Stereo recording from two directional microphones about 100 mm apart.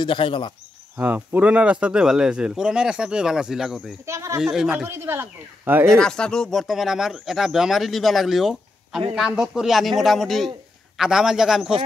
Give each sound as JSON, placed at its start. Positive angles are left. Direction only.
{"t": 0.0, "sound": "speech", "side_deg": 55}
{"t": 0.9, "sound": "speech", "side_deg": -20}
{"t": 4.0, "sound": "speech", "side_deg": -30}
{"t": 4.4, "sound": "speech", "side_deg": -5}
{"t": 4.8, "sound": "speech", "side_deg": -25}
{"t": 5.9, "sound": "speech", "side_deg": 10}